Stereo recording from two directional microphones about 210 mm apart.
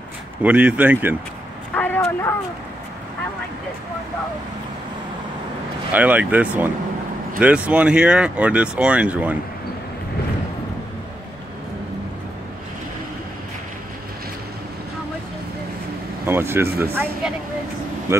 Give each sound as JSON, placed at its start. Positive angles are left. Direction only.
{"t": 0.4, "sound": "speech", "side_deg": -5}
{"t": 1.7, "sound": "a sound", "side_deg": 10}
{"t": 5.9, "sound": "speech", "side_deg": -5}
{"t": 16.3, "sound": "speech", "side_deg": -10}